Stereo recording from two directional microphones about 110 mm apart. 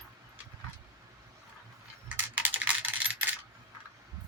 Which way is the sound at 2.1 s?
15° right (ahead or behind).